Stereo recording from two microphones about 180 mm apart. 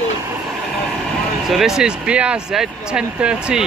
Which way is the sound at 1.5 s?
Centre (ahead or behind).